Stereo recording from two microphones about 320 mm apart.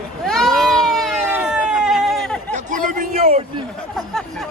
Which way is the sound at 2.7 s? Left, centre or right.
Right.